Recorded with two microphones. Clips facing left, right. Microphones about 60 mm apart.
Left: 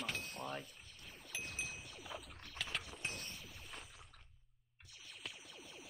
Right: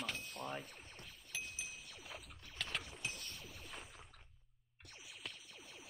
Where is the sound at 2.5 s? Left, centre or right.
Centre.